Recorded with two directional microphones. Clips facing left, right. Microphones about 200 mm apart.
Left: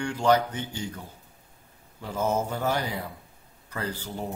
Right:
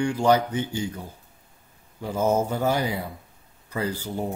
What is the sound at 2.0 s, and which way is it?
Speech, 10° right (ahead or behind).